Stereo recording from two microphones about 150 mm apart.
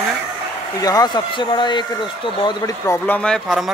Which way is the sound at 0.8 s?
25° left (ahead or behind).